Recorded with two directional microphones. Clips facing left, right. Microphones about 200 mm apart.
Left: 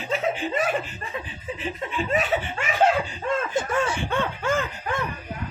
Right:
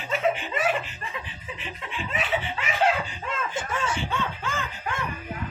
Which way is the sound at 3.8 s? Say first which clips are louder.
Left 3 dB; 55° left (ahead or behind).